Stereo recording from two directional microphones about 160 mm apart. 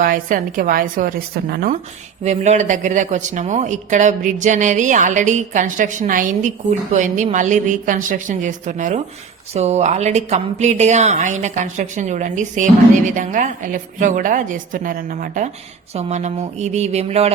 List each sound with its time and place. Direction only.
0.0 s a woman's voice: 60° right (ahead or behind)
2.2 s speech: 45° right (ahead or behind)
16.0 s speech: 45° right (ahead or behind)